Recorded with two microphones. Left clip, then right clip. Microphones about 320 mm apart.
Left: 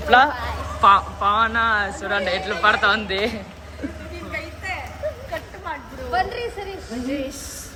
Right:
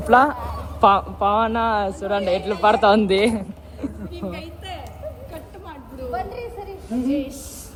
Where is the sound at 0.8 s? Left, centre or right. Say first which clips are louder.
Left 1 dB; centre.